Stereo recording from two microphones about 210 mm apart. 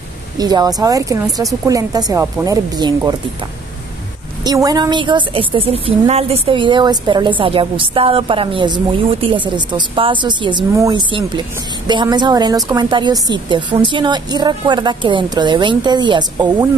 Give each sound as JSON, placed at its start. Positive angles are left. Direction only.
{"t": 0.4, "sound": "speech", "side_deg": -20}
{"t": 4.4, "sound": "a woman's voice", "side_deg": -15}